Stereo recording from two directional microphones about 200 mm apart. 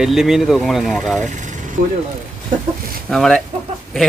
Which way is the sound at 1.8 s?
40° right (ahead or behind).